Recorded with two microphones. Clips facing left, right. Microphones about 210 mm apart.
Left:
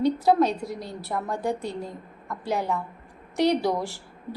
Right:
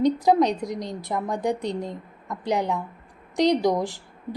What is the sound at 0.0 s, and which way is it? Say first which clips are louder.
A woman's voice: right 1 dB; 15° right (ahead or behind).